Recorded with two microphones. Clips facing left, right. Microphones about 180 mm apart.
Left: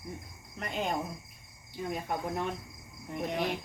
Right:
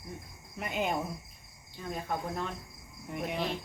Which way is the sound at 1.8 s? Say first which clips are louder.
Left 1 dB; 15° left (ahead or behind).